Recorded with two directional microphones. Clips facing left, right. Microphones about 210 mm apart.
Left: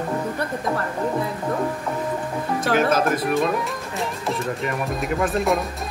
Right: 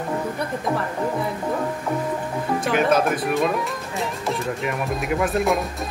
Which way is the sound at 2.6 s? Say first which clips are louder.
Even; centre (ahead or behind).